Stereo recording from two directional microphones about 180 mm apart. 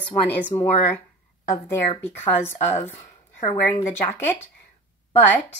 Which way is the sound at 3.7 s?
10° left (ahead or behind).